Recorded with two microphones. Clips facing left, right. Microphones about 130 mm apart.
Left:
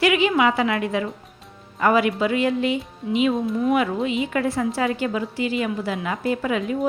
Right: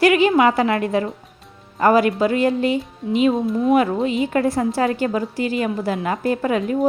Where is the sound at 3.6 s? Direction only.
35° right (ahead or behind).